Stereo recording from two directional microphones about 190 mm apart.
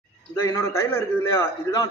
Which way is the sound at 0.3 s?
15° left (ahead or behind).